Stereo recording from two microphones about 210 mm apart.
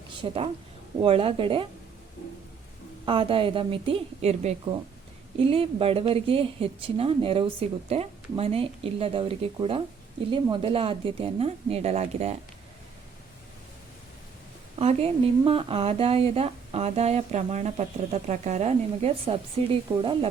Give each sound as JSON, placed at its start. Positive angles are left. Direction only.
{"t": 0.2, "sound": "speech", "side_deg": -25}
{"t": 3.1, "sound": "speech", "side_deg": -25}
{"t": 14.8, "sound": "speech", "side_deg": -30}